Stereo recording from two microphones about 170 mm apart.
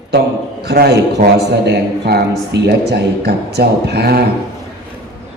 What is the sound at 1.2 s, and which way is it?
Speech, 45° right (ahead or behind).